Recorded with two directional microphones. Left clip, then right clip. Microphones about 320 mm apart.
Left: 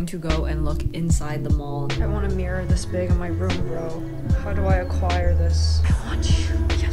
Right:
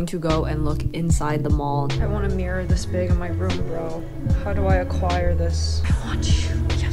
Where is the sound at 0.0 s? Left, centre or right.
Centre.